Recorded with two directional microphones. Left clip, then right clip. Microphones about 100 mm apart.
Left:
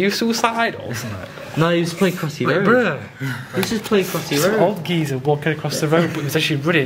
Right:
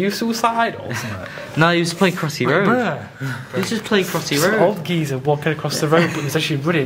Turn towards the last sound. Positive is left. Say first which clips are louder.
# left 1 dB
turn(degrees=0)  # may be behind; listen again after turning